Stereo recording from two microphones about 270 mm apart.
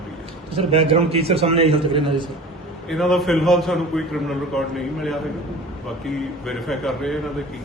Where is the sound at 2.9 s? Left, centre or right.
Centre.